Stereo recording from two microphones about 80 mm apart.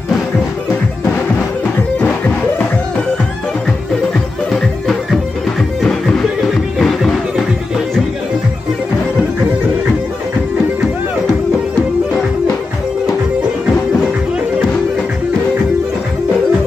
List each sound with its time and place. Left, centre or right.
2.0 s music: centre
4.5 s music: centre